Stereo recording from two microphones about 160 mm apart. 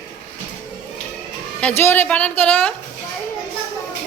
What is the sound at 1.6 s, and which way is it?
A woman's voice, 10° left (ahead or behind).